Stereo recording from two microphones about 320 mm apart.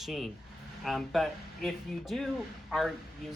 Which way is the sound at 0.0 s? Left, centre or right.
Centre.